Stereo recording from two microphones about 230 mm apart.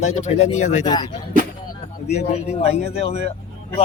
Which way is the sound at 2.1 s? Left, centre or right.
Left.